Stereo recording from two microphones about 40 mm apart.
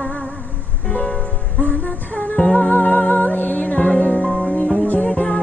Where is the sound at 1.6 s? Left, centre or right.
Left.